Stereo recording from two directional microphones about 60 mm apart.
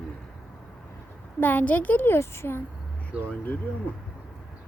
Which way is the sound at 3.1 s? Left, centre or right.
Centre.